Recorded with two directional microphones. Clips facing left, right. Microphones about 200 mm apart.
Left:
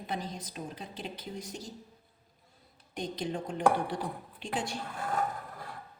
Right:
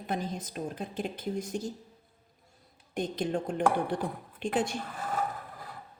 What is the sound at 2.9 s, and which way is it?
A woman's voice, 50° right (ahead or behind).